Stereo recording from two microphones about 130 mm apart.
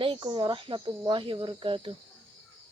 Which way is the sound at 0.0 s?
40° right (ahead or behind).